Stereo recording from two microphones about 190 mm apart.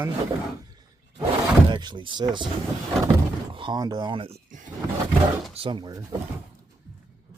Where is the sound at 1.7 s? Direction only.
25° right (ahead or behind).